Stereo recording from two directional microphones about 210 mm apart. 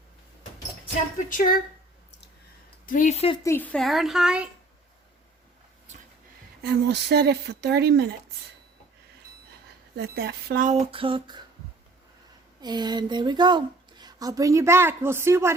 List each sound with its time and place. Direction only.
1.3 s speech: 40° left (ahead or behind)
2.8 s speech: 40° left (ahead or behind)
3.4 s speech: 10° left (ahead or behind)
6.6 s speech: 50° right (ahead or behind)
9.9 s speech: 50° right (ahead or behind); by 11.4 s 20° right (ahead or behind)
12.6 s speech: 20° right (ahead or behind)